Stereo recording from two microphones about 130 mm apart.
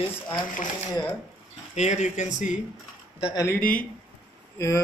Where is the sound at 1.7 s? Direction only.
60° left (ahead or behind).